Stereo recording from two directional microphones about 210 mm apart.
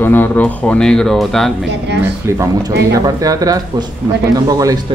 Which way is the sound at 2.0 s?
15° right (ahead or behind).